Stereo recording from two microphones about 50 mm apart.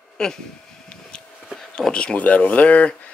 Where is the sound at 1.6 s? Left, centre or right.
Centre.